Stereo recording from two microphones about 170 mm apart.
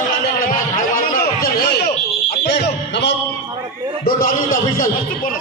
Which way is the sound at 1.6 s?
70° left (ahead or behind).